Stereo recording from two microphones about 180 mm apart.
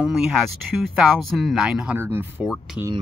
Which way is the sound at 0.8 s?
Centre (ahead or behind).